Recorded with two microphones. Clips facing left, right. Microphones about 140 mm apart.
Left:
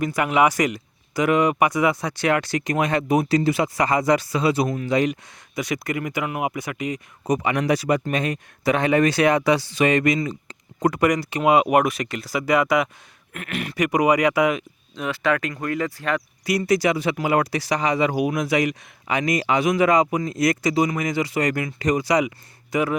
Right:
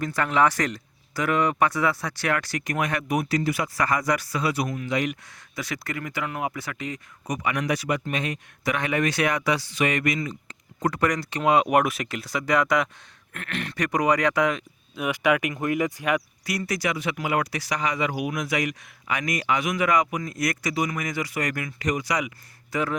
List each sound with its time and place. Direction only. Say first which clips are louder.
0.0 s speech: left 3 dB; 10° left (ahead or behind); by 5.1 s 30° left (ahead or behind)
5.5 s speech: left 6 dB; 15° left (ahead or behind)
7.3 s speech: left 6 dB; 30° left (ahead or behind)
8.6 s speech: left 6 dB; 30° left (ahead or behind)
10.8 s speech: left 5 dB; 15° left (ahead or behind)
14.9 s speech: even; 10° right (ahead or behind)
16.5 s speech: left 8 dB; 25° left (ahead or behind)
22.7 s speech: left 4 dB; 10° left (ahead or behind)